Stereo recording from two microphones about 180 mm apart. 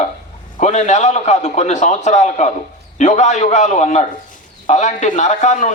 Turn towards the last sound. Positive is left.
turn(degrees=40)  # may be behind; listen again after turning